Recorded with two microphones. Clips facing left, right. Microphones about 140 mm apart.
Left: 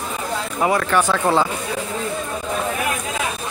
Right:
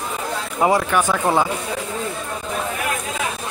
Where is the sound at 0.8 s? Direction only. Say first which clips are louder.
Left 1 dB; 10° right (ahead or behind).